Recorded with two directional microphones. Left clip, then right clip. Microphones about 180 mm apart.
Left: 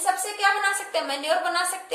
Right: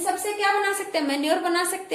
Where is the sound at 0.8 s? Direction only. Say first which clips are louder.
Right 2 dB; 10° right (ahead or behind).